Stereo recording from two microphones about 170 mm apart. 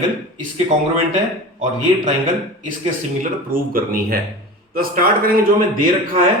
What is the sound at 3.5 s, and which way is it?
Speech, 55° right (ahead or behind).